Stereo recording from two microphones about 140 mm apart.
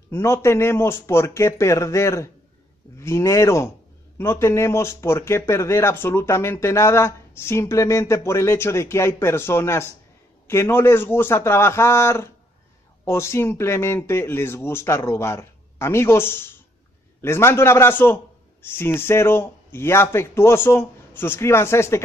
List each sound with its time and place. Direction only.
0.1 s a man's voice: 20° left (ahead or behind)